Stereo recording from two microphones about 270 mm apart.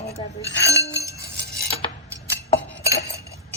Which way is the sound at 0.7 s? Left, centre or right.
Centre.